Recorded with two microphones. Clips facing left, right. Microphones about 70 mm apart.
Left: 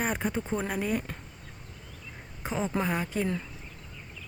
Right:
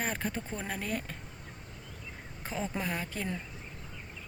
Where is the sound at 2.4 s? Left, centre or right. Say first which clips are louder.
Left 6 dB; centre.